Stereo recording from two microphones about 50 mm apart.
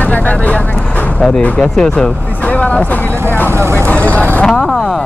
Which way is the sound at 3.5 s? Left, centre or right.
Right.